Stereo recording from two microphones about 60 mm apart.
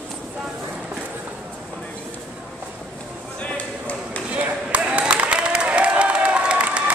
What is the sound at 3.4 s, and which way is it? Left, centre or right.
Chop, left.